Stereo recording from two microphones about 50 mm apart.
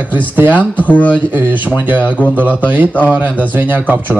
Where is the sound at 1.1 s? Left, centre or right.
Right.